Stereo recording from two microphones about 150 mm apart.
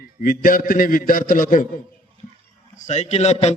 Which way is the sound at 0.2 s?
70° left (ahead or behind).